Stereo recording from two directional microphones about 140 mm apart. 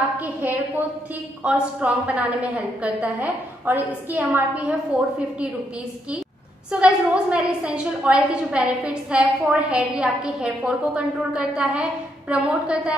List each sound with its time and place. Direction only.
0.2 s a woman's voice: 10° right (ahead or behind)
6.7 s a woman's voice: 5° right (ahead or behind)